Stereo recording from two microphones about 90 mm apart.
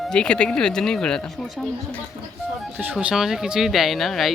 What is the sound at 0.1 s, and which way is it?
Speech, 10° left (ahead or behind).